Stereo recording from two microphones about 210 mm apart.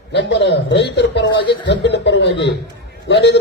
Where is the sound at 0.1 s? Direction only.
55° left (ahead or behind).